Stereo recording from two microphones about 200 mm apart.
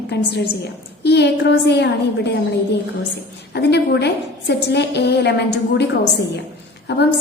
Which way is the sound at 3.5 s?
60° left (ahead or behind).